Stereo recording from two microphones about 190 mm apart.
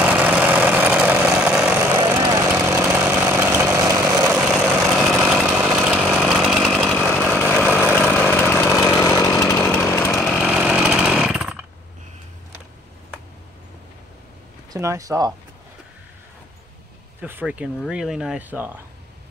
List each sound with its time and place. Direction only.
0.0 s vehicle: 10° right (ahead or behind)
1.8 s a sound: 20° right (ahead or behind)
2.7 s vehicle: 15° right (ahead or behind)
4.4 s vehicle: 5° right (ahead or behind)
5.9 s chainsaw: 5° right (ahead or behind)
7.2 s vehicle: 5° right (ahead or behind)
8.1 s chainsaw: 10° left (ahead or behind)
9.8 s chainsaw: 15° left (ahead or behind)
10.2 s chainsaw: centre (ahead or behind)
14.7 s speech: 15° right (ahead or behind)
17.2 s speech: 10° right (ahead or behind)